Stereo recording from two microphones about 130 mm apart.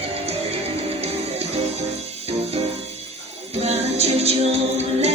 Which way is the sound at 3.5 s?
55° right (ahead or behind).